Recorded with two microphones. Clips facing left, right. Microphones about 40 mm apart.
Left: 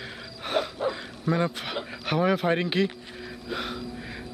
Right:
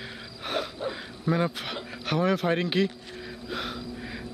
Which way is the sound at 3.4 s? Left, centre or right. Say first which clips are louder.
Left 2 dB; centre.